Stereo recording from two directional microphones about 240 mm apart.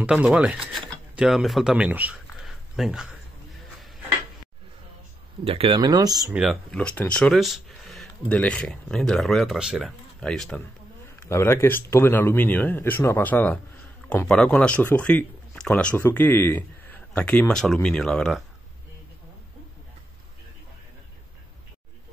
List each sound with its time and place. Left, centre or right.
0.0 s speech: centre
5.4 s speech: right
6.3 s speech: centre